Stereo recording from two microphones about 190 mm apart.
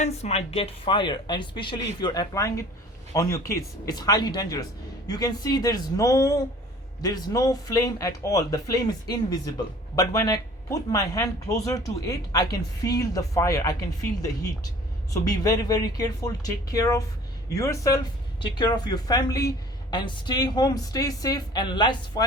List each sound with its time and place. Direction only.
0.0 s speech: 35° left (ahead or behind)